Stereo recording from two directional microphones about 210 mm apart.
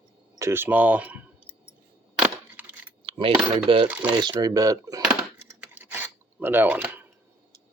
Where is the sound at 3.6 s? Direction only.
25° right (ahead or behind).